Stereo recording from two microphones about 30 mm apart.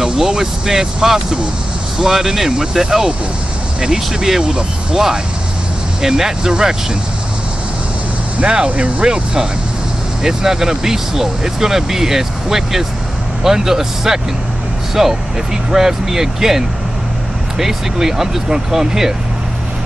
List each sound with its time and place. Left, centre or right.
0.0 s speech: centre
8.5 s speech: right
10.2 s speech: centre